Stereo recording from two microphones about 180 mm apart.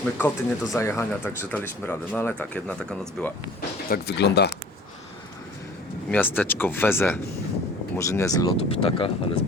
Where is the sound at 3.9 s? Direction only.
65° left (ahead or behind).